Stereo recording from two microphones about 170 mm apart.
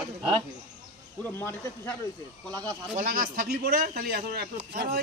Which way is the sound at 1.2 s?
15° left (ahead or behind).